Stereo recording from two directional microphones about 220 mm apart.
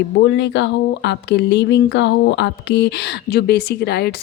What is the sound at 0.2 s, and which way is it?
Speech, 55° left (ahead or behind).